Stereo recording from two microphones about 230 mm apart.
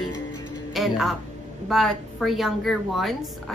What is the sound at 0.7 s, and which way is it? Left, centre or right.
Music, centre.